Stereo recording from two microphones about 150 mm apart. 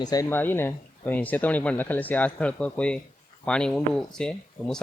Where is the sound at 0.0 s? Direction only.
25° left (ahead or behind).